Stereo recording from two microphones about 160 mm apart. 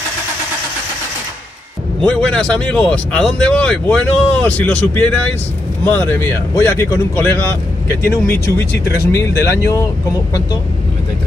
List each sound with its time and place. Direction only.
2.0 s speech: 5° left (ahead or behind)